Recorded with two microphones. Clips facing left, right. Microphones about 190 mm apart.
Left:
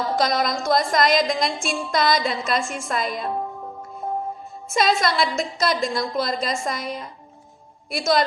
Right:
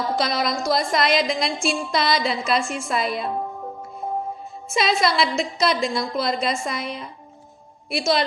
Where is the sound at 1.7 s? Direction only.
45° left (ahead or behind).